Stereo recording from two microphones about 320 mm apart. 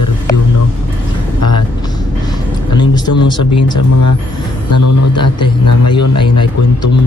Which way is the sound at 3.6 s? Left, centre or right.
Left.